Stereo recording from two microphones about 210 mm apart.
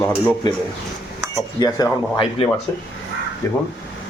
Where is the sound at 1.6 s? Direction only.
20° left (ahead or behind).